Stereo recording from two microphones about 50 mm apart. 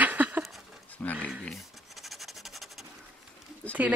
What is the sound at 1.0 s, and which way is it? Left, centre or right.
Speech, left.